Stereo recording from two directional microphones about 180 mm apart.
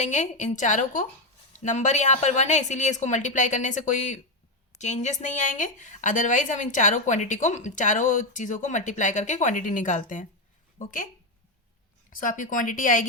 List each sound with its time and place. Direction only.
0.0 s a woman's voice: 40° left (ahead or behind)
12.1 s a woman's voice: 50° left (ahead or behind)